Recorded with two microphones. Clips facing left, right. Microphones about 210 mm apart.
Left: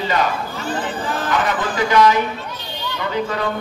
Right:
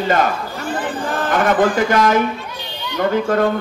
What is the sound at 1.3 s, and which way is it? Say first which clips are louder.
A man's voice: right 8 dB; 50° right (ahead or behind).